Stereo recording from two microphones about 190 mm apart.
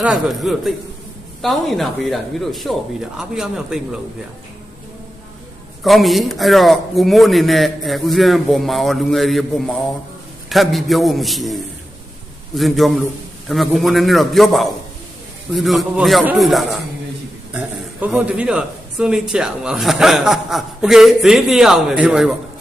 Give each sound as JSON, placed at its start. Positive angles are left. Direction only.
{"t": 0.0, "sound": "a man's voice", "side_deg": -5}
{"t": 5.8, "sound": "a man's voice", "side_deg": 0}